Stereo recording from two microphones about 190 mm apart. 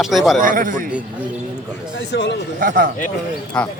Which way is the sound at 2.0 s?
65° left (ahead or behind).